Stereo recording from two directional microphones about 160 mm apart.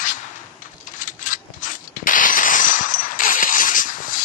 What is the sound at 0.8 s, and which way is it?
Mechanisms, 55° left (ahead or behind).